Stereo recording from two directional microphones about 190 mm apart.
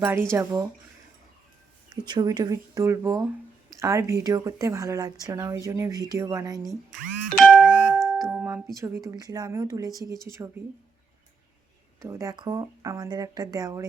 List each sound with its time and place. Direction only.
0.3 s speech: 15° right (ahead or behind)
2.0 s speech: 20° right (ahead or behind)
7.3 s doorbell: 5° right (ahead or behind)
8.7 s speech: 15° right (ahead or behind)
11.9 s speech: 15° right (ahead or behind)